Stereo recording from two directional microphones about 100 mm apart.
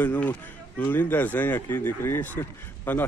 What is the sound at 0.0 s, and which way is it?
A man's voice, 15° left (ahead or behind).